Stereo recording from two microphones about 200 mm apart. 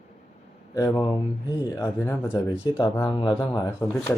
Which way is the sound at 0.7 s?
15° left (ahead or behind).